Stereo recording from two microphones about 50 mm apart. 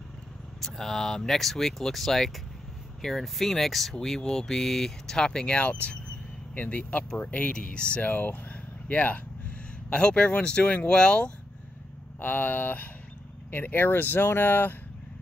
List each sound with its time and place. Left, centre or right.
0.6 s speech: centre
5.6 s speech: left
8.1 s speech: left
9.8 s speech: centre
12.2 s speech: left